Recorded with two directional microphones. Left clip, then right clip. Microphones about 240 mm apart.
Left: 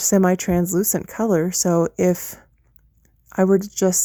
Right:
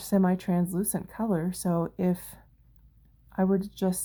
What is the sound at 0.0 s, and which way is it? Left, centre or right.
Speech, left.